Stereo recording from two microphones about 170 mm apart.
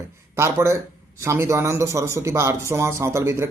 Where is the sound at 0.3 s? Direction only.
15° right (ahead or behind).